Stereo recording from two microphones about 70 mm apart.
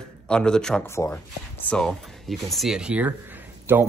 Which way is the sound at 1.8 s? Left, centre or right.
Centre.